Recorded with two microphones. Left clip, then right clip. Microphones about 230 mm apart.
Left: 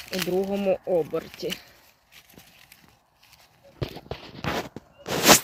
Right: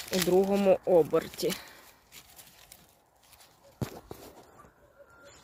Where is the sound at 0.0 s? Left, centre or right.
Centre.